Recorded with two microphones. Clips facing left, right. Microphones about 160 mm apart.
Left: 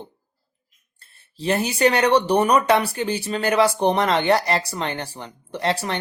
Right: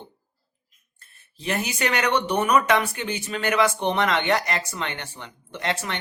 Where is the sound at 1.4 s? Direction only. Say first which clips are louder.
Left 7 dB; 30° left (ahead or behind).